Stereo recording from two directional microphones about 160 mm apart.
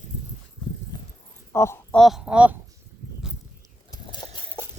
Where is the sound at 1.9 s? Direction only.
Centre (ahead or behind).